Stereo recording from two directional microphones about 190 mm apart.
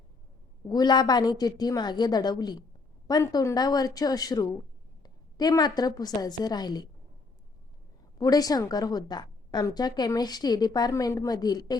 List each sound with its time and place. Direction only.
0.7 s a woman's voice: 20° left (ahead or behind)
8.2 s a woman's voice: 20° left (ahead or behind)